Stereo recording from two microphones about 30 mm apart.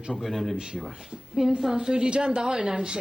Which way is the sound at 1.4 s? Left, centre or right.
Centre.